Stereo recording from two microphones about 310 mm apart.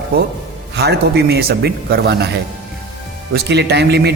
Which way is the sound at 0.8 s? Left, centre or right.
Right.